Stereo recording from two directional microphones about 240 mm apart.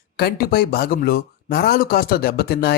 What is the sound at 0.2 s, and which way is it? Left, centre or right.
Speech, left.